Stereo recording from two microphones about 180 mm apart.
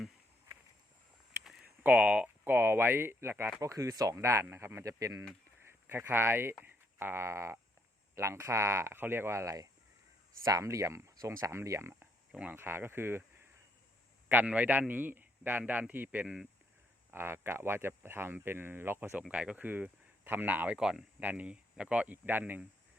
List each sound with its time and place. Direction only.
0.5 s a sound: 15° right (ahead or behind)
1.5 s speech: 5° right (ahead or behind)
14.3 s speech: 10° right (ahead or behind)